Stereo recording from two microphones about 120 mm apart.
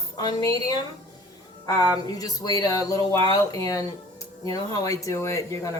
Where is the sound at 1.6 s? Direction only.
30° left (ahead or behind).